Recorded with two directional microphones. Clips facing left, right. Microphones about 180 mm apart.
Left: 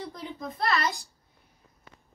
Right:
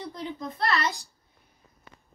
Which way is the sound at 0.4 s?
Centre (ahead or behind).